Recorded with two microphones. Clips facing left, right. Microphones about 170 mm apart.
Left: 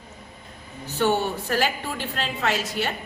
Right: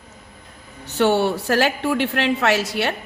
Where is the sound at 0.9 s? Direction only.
75° right (ahead or behind).